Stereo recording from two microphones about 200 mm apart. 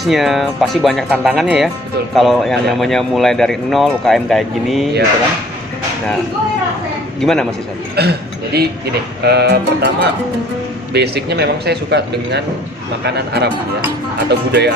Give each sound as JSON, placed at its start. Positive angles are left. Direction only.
{"t": 0.0, "sound": "speech", "side_deg": 0}
{"t": 7.2, "sound": "speech", "side_deg": 0}
{"t": 8.0, "sound": "speech", "side_deg": -55}